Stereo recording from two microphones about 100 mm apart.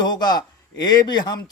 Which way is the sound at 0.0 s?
45° left (ahead or behind).